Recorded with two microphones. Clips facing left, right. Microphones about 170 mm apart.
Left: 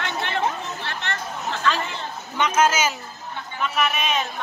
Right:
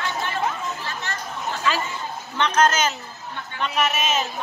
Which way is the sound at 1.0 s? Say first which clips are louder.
Left 4 dB; 60° left (ahead or behind).